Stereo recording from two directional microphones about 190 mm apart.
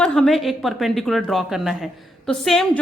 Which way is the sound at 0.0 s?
5° left (ahead or behind).